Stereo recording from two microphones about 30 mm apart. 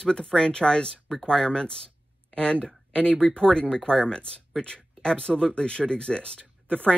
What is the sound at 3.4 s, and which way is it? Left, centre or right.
Speech, left.